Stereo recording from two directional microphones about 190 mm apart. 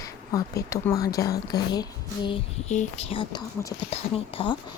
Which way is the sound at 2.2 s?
30° left (ahead or behind).